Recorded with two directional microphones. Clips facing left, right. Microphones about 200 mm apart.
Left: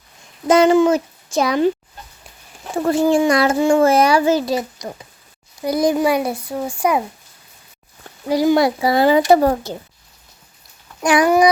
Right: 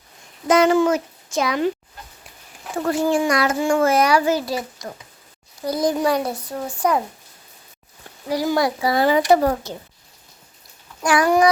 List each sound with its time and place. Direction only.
0.4 s a child's voice: 30° left (ahead or behind)
2.7 s a child's voice: 25° left (ahead or behind); by 7.0 s 10° left (ahead or behind)
8.3 s a child's voice: 25° left (ahead or behind)
11.0 s a sound: 20° left (ahead or behind)